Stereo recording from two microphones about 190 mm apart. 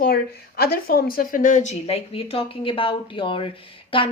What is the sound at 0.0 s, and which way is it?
Speech, 55° left (ahead or behind).